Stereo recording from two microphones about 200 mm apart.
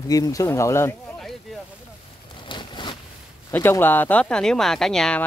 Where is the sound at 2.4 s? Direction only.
25° left (ahead or behind).